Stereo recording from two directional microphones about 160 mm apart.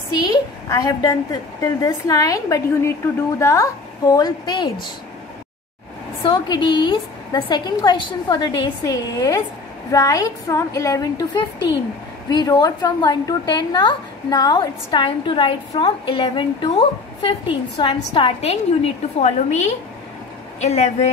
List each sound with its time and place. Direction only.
0.1 s a woman's voice: 25° left (ahead or behind)
6.2 s a woman's voice: 25° left (ahead or behind); by 21.1 s 45° left (ahead or behind)